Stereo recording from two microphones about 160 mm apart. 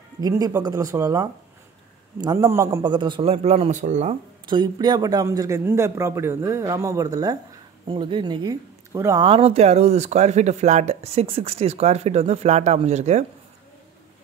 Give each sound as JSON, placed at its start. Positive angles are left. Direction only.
{"t": 0.2, "sound": "a man's voice", "side_deg": -20}
{"t": 4.5, "sound": "speech", "side_deg": -25}
{"t": 9.2, "sound": "speech", "side_deg": -35}